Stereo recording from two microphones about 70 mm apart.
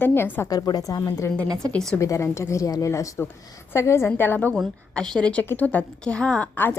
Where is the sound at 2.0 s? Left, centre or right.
Left.